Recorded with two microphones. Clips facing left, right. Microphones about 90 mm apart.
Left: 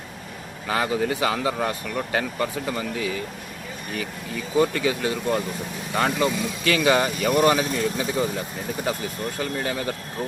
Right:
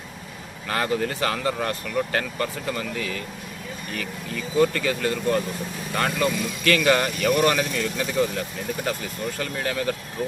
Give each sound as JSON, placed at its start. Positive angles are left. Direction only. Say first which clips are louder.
{"t": 0.7, "sound": "speech", "louder": "left 1 dB", "side_deg": 10}
{"t": 9.4, "sound": "speech", "louder": "even", "side_deg": 15}